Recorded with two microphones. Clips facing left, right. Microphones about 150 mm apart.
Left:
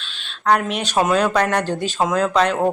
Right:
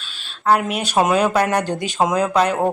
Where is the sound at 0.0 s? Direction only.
5° right (ahead or behind).